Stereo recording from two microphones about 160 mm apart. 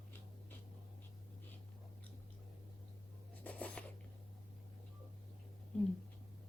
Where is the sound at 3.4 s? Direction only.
5° left (ahead or behind).